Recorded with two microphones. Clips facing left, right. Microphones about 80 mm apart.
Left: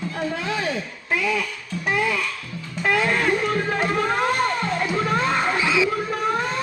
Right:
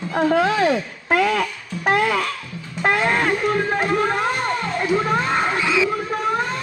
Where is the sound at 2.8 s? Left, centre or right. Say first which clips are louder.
Right 2 dB; right.